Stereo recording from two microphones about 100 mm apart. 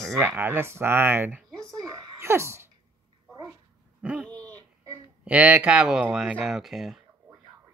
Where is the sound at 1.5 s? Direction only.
5° left (ahead or behind).